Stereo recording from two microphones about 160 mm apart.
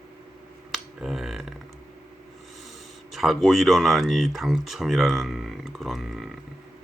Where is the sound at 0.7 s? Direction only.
Centre (ahead or behind).